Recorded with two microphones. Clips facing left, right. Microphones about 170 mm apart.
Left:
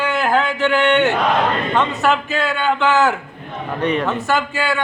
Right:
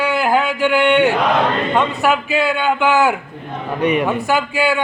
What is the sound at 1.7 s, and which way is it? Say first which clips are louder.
A man's voice: right 1 dB; 15° right (ahead or behind).